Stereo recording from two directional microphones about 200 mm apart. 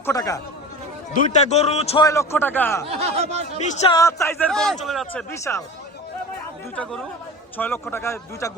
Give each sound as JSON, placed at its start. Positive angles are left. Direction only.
{"t": 0.0, "sound": "a man's voice", "side_deg": 15}
{"t": 1.1, "sound": "a man's voice", "side_deg": 35}
{"t": 2.0, "sound": "a man's voice", "side_deg": 15}
{"t": 3.0, "sound": "speech", "side_deg": -30}
{"t": 3.6, "sound": "a man's voice", "side_deg": 35}
{"t": 3.9, "sound": "a man's voice", "side_deg": 15}
{"t": 5.3, "sound": "a man's voice", "side_deg": 15}
{"t": 7.5, "sound": "a man's voice", "side_deg": 10}